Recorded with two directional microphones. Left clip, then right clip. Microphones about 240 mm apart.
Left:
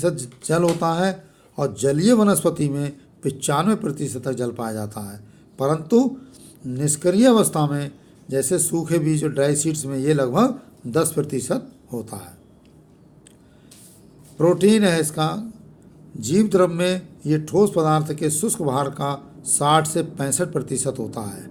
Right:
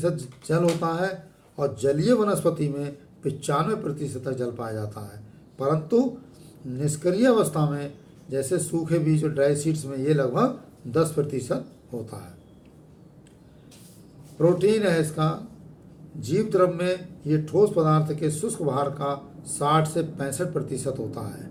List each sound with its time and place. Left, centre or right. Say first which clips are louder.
0.0 s speech: left 4 dB; left
14.3 s speech: left 3 dB; left